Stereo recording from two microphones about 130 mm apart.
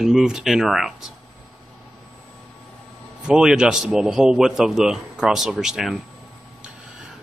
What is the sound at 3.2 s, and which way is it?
A man's voice, 5° right (ahead or behind).